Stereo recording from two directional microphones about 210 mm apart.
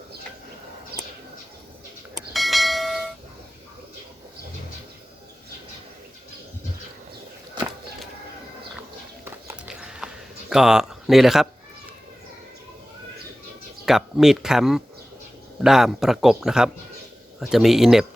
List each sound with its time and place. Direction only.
0.9 s bird: 50° right (ahead or behind)
2.3 s bell: centre (ahead or behind)
9.2 s horse: 10° right (ahead or behind)
10.5 s speech: 5° right (ahead or behind)
13.8 s speech: centre (ahead or behind)